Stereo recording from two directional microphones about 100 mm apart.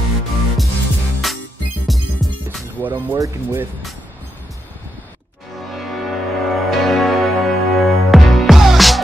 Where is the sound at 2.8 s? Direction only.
20° right (ahead or behind).